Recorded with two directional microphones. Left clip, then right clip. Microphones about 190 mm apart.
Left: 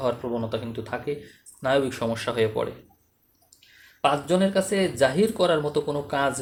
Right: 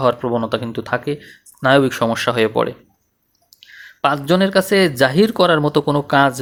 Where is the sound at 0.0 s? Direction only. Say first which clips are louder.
Right 10 dB; 45° right (ahead or behind).